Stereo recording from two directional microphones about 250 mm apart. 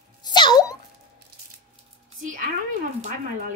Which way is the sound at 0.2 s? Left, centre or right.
Centre.